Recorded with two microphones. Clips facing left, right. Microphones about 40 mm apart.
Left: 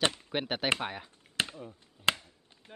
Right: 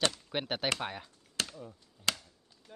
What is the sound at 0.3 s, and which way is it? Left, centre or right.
Speech, centre.